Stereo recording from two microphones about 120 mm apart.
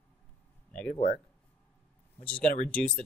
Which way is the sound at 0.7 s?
10° left (ahead or behind).